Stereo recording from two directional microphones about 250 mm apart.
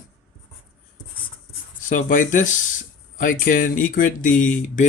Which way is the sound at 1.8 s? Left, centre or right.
Left.